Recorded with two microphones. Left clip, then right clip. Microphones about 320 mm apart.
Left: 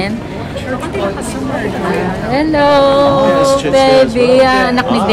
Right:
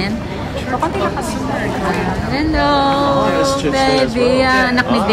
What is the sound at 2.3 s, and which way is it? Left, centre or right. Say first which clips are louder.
Speech: left 6 dB; centre.